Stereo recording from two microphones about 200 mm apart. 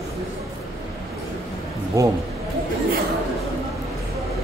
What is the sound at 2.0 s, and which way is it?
Speech, 15° right (ahead or behind).